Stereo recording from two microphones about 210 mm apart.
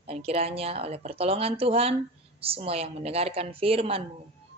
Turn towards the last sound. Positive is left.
turn(degrees=-25)  # may be behind; listen again after turning